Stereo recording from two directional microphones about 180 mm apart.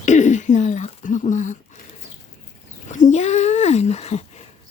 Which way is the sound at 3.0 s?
40° left (ahead or behind).